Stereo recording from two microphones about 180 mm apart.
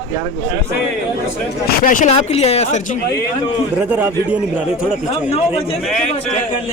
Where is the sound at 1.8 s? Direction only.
45° left (ahead or behind).